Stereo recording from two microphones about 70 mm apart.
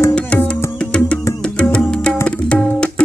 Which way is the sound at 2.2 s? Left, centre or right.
Centre.